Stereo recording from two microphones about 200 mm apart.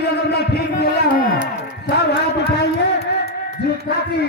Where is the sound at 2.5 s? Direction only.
55° left (ahead or behind).